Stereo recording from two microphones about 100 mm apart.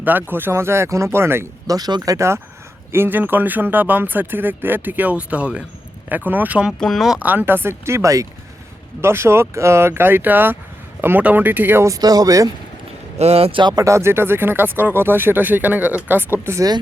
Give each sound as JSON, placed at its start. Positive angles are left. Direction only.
{"t": 0.0, "sound": "speech", "side_deg": -20}
{"t": 1.6, "sound": "speech", "side_deg": -40}
{"t": 6.7, "sound": "speech", "side_deg": 5}
{"t": 7.2, "sound": "speech", "side_deg": -15}
{"t": 11.9, "sound": "speech", "side_deg": -40}
{"t": 13.1, "sound": "a man's voice", "side_deg": -90}
{"t": 13.6, "sound": "speech", "side_deg": -45}
{"t": 13.8, "sound": "speech", "side_deg": -30}
{"t": 16.6, "sound": "speech", "side_deg": -40}